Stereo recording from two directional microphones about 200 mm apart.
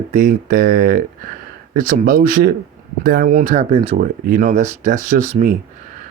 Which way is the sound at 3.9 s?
45° right (ahead or behind).